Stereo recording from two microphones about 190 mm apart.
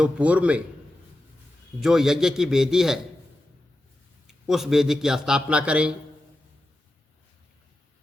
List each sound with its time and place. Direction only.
0.0 s a man's voice: 5° right (ahead or behind)
1.8 s a man's voice: centre (ahead or behind)
4.3 s a man's voice: centre (ahead or behind)